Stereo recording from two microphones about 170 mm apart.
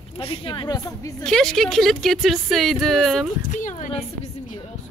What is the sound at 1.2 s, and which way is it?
Speech, 5° left (ahead or behind).